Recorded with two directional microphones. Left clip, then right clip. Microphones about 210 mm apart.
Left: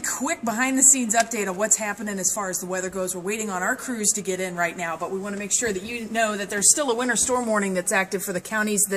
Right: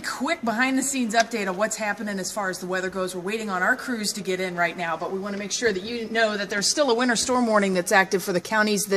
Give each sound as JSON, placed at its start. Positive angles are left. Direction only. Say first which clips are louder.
{"t": 0.2, "sound": "speech", "louder": "right 2 dB", "side_deg": 0}
{"t": 6.1, "sound": "a man's voice", "louder": "right 1 dB", "side_deg": -15}
{"t": 6.8, "sound": "a woman's voice", "louder": "right 2 dB", "side_deg": -30}